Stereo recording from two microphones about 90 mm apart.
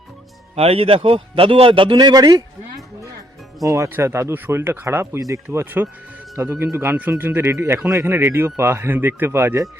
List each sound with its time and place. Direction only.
0.6 s a man's voice: 90° right; by 2.8 s 45° right (ahead or behind)
3.6 s speech: 35° right (ahead or behind)